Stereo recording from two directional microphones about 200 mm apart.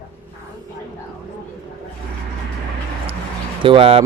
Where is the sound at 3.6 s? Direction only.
25° right (ahead or behind).